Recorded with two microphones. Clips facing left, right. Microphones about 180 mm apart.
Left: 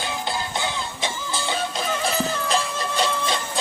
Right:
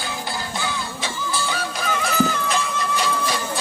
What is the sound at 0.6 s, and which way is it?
Music, 20° left (ahead or behind).